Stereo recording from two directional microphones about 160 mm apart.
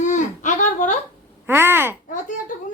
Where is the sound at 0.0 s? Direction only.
50° left (ahead or behind).